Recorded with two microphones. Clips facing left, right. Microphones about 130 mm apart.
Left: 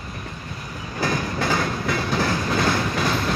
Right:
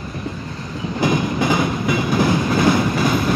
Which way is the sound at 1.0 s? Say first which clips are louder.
Right 6 dB; 15° right (ahead or behind).